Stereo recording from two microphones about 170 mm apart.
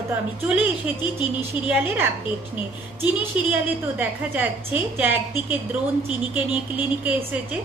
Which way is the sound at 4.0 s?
10° right (ahead or behind).